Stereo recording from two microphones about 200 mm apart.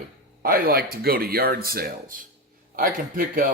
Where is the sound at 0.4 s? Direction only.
45° right (ahead or behind).